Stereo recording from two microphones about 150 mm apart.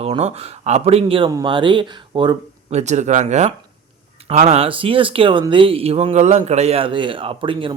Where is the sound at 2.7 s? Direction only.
50° right (ahead or behind).